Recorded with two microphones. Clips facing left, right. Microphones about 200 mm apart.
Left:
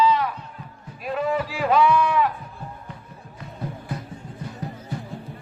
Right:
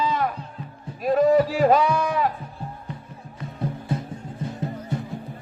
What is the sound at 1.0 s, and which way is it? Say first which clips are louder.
Speech: right 7 dB; 40° right (ahead or behind).